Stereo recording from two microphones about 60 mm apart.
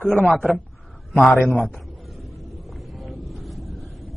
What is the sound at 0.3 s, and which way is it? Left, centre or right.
Speech, centre.